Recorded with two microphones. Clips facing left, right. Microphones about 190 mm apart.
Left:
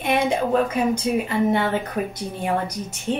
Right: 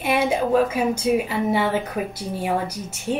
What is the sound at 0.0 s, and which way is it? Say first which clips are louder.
A woman's voice: even; 5° right (ahead or behind).